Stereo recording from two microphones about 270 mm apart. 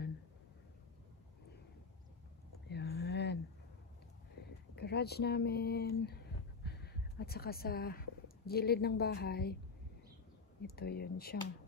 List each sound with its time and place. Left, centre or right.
2.7 s a sound: left
4.7 s speech: left
10.8 s speech: left